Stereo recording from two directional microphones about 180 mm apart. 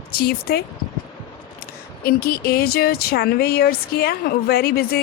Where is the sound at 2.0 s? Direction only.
60° left (ahead or behind).